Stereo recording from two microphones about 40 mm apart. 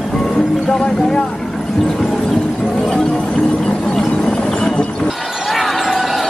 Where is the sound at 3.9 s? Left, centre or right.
Centre.